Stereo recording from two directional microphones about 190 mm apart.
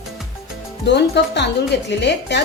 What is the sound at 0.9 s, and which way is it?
Speech, 65° left (ahead or behind).